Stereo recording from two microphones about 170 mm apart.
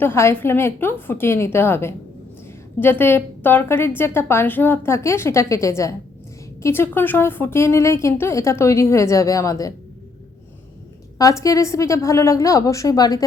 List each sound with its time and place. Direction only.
0.0 s a woman's voice: 15° left (ahead or behind)
11.2 s a woman's voice: 20° left (ahead or behind)